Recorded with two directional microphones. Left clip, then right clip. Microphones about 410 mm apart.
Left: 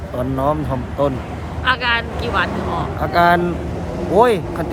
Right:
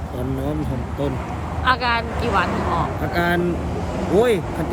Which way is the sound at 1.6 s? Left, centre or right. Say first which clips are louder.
Left 2 dB; centre.